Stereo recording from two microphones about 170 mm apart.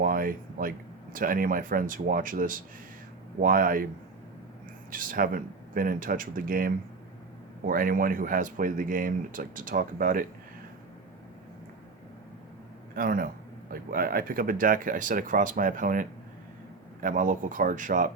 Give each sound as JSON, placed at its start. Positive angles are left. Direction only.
{"t": 0.0, "sound": "speech", "side_deg": -55}
{"t": 4.9, "sound": "speech", "side_deg": -55}
{"t": 13.0, "sound": "speech", "side_deg": -55}